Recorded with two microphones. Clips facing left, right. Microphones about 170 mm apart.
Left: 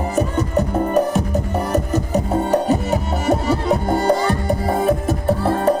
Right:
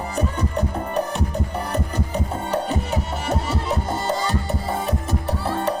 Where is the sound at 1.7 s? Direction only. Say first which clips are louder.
Left 9 dB; 45° left (ahead or behind).